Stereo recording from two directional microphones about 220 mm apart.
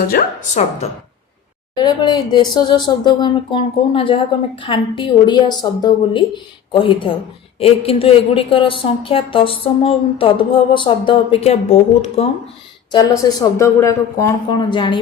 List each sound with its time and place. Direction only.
0.1 s speech: 35° left (ahead or behind)
1.7 s a woman's voice: 20° left (ahead or behind)
12.9 s speech: 15° left (ahead or behind)